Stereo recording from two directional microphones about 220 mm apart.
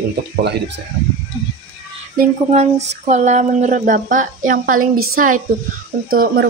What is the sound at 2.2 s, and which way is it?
Speech, 30° right (ahead or behind).